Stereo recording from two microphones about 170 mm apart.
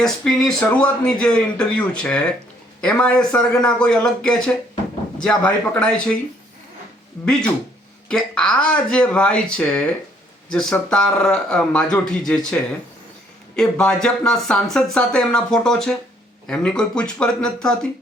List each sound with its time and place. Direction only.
0.0 s speech: 5° left (ahead or behind)
8.0 s speech: 5° left (ahead or behind)
13.6 s speech: 5° left (ahead or behind)